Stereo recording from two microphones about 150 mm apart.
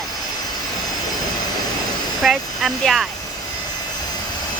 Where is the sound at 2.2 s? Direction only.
Centre (ahead or behind).